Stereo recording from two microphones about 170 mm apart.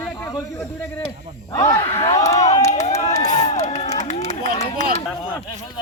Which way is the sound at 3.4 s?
40° left (ahead or behind).